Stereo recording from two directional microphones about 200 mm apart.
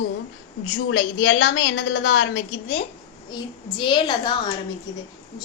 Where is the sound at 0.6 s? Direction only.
75° left (ahead or behind).